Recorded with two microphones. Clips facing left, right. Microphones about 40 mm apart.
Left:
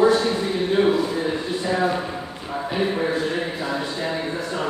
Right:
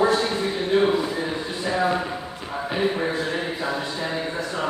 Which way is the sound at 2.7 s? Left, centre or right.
Centre.